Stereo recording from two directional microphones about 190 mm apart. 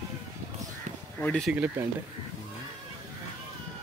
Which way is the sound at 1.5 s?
5° right (ahead or behind).